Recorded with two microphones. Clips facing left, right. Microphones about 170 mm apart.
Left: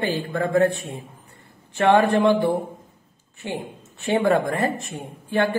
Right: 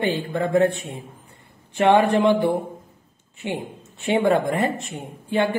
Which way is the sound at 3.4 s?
20° right (ahead or behind).